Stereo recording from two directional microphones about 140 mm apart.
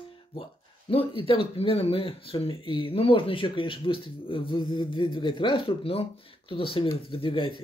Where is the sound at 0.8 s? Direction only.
40° left (ahead or behind).